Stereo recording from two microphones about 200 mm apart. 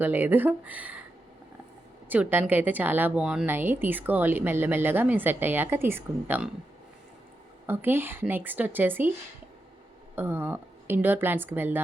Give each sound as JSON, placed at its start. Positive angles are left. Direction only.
{"t": 0.0, "sound": "speech", "side_deg": -10}
{"t": 2.0, "sound": "speech", "side_deg": -10}
{"t": 7.7, "sound": "speech", "side_deg": -10}
{"t": 10.2, "sound": "speech", "side_deg": -10}